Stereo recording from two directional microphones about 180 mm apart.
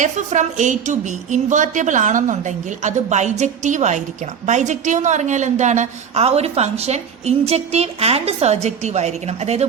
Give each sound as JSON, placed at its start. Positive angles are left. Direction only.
{"t": 0.0, "sound": "a woman's voice", "side_deg": -40}